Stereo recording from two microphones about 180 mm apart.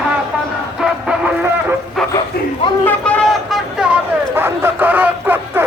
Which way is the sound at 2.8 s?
5° left (ahead or behind).